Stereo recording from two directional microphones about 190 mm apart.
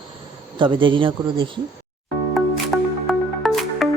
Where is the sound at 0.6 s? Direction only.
25° right (ahead or behind).